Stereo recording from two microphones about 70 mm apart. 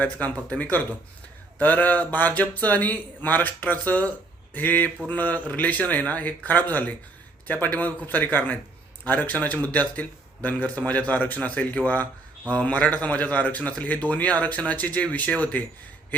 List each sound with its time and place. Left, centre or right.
0.4 s a man's voice: left